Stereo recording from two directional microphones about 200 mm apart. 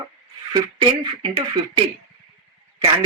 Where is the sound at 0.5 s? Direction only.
25° right (ahead or behind).